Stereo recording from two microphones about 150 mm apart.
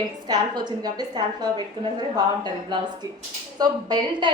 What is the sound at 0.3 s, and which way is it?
A woman's voice, 30° right (ahead or behind).